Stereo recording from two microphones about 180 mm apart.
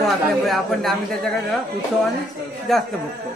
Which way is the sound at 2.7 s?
Centre (ahead or behind).